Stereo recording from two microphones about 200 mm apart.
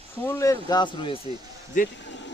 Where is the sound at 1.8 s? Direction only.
40° left (ahead or behind).